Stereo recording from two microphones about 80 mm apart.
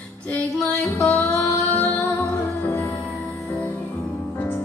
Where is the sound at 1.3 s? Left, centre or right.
Left.